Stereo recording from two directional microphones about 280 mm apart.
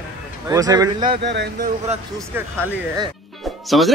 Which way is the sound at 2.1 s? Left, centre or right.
Centre.